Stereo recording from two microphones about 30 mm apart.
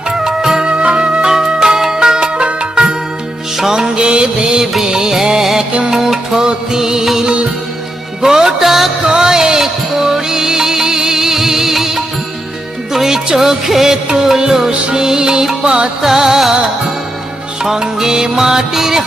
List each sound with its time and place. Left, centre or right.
0.3 s music: centre
0.6 s music: right
3.7 s music: right
6.3 s music: right
8.2 s music: centre
9.0 s music: right
13.8 s music: right
15.6 s music: right
16.0 s music: centre
17.6 s music: centre